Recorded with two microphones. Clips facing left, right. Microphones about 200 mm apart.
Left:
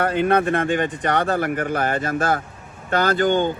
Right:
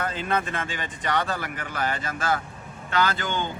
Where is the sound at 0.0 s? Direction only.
60° left (ahead or behind).